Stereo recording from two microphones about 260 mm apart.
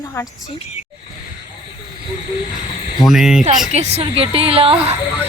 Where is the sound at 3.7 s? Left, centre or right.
Right.